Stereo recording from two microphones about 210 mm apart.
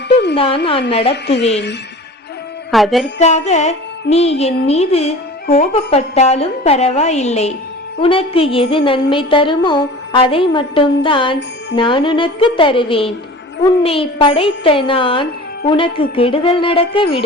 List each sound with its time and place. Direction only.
0.1 s a sound: 55° left (ahead or behind)
0.3 s music: 25° left (ahead or behind)
2.7 s music: centre (ahead or behind)
3.2 s speech: 35° left (ahead or behind)
8.0 s music: 25° left (ahead or behind)